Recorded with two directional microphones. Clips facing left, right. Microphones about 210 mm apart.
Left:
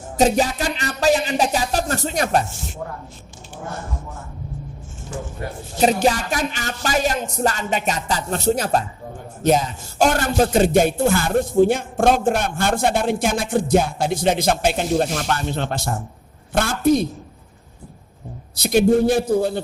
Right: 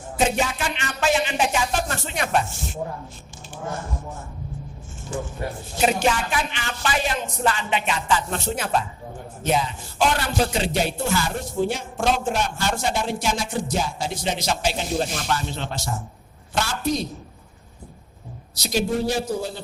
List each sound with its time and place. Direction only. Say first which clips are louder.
0.2 s speech: left 5 dB; 35° left (ahead or behind)
5.8 s a man's voice: left 4 dB; 40° left (ahead or behind); by 17.1 s 55° left (ahead or behind)
18.5 s a man's voice: left 8 dB; 55° left (ahead or behind)